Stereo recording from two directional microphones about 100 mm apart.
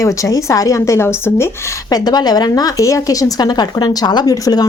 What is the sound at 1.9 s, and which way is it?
A woman's voice, 45° left (ahead or behind).